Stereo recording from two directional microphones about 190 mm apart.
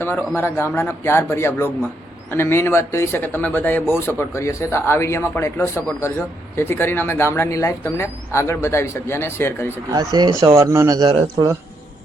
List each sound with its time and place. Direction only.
0.0 s speech: 10° left (ahead or behind)
9.9 s speech: 20° right (ahead or behind)
11.1 s speech: 30° right (ahead or behind)